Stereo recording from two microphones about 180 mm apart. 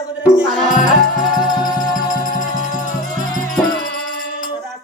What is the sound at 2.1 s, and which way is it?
Music, 50° left (ahead or behind).